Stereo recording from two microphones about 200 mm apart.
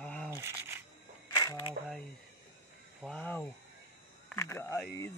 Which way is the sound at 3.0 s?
5° left (ahead or behind).